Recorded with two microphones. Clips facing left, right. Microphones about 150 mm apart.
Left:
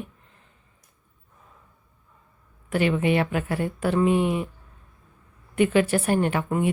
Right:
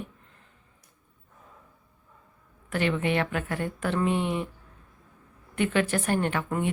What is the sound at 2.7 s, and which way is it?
Speech, 15° left (ahead or behind).